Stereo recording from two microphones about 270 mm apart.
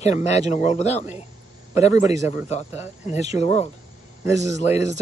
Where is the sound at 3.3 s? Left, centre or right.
Left.